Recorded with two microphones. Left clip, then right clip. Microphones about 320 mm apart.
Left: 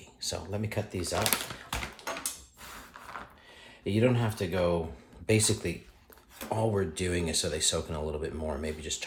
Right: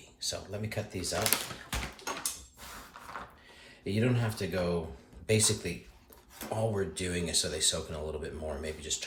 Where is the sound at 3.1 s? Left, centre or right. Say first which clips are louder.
Even; centre.